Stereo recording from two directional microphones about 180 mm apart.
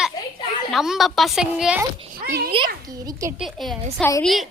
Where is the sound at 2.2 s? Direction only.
55° right (ahead or behind).